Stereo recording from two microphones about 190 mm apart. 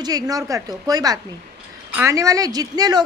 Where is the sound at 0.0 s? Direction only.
20° right (ahead or behind).